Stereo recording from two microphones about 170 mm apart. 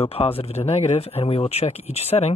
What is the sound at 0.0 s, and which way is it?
Speech, 35° left (ahead or behind).